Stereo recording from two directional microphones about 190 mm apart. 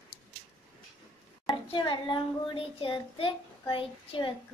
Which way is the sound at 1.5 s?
25° left (ahead or behind).